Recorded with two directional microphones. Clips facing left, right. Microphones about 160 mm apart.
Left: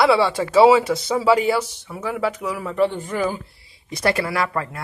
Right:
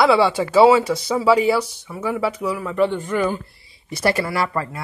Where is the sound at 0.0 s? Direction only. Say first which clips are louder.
Right 1 dB; centre (ahead or behind).